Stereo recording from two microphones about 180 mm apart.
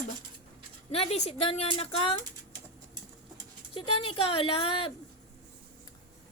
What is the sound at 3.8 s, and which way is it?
A woman's voice, 30° left (ahead or behind).